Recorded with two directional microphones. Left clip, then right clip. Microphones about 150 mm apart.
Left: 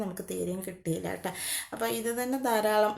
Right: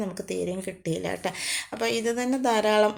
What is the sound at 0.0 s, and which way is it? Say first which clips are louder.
Speech: right 4 dB; 15° right (ahead or behind).